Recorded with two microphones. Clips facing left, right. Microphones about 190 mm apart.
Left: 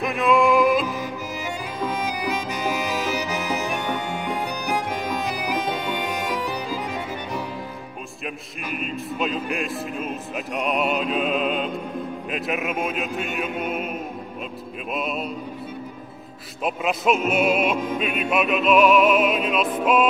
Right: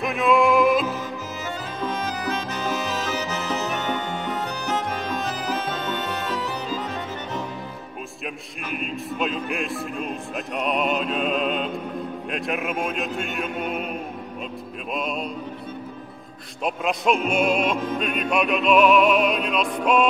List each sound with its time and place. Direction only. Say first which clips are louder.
0.0 s music: even; centre (ahead or behind)
1.8 s music: left 1 dB; 10° left (ahead or behind)
8.6 s music: even; centre (ahead or behind)
15.0 s music: even; 5° left (ahead or behind)
16.6 s music: left 1 dB; centre (ahead or behind)